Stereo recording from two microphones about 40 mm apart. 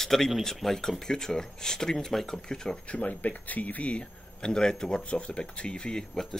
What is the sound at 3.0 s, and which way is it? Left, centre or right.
Speech, left.